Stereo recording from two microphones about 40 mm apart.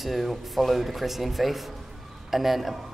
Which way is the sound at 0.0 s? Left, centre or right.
Centre.